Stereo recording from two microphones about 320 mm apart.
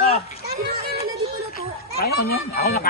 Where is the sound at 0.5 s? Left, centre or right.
Right.